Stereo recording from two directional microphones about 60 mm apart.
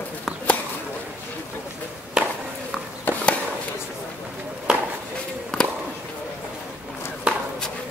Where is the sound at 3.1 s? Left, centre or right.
Left.